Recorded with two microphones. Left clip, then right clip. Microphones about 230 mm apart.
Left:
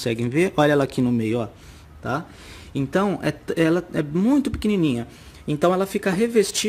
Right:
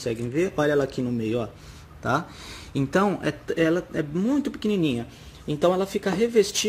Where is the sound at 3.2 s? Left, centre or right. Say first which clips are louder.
Left 2 dB; left.